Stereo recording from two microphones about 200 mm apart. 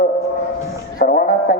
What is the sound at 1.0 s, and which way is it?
Speech, 45° left (ahead or behind).